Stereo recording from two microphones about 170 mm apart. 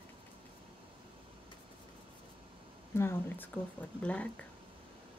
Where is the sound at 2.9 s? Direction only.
10° left (ahead or behind).